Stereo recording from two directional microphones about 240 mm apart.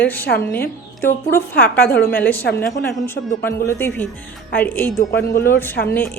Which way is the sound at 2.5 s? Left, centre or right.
Centre.